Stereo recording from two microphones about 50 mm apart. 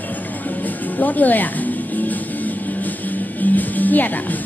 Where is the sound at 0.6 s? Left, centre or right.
Left.